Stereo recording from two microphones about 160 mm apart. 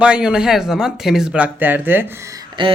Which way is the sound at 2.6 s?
30° right (ahead or behind).